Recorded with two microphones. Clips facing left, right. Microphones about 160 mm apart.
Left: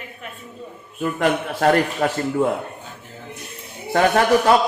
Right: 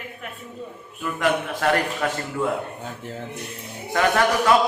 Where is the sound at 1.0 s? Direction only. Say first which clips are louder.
Left 3 dB; 40° left (ahead or behind).